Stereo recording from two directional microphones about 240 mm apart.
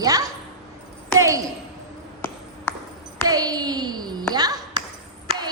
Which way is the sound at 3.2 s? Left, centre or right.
Centre.